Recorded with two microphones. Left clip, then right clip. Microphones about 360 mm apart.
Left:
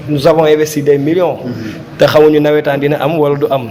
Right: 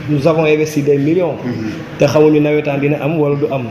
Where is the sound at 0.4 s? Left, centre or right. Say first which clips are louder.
Left 3 dB; left.